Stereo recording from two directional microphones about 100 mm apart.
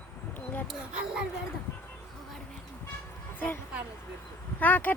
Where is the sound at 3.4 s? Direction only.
20° left (ahead or behind).